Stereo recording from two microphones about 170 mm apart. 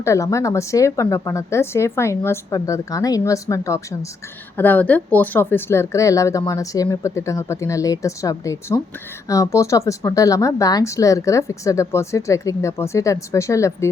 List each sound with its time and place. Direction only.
0.0 s speech: 15° left (ahead or behind)